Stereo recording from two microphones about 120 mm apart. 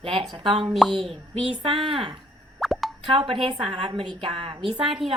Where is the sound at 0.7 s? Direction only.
Centre (ahead or behind).